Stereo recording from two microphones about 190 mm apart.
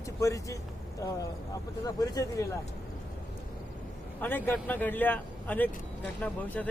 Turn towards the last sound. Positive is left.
turn(degrees=5)  # may be behind; listen again after turning